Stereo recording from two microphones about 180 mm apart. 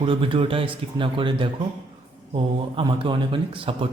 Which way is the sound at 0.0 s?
30° right (ahead or behind).